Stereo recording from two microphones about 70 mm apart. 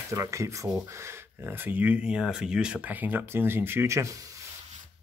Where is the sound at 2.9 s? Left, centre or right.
Right.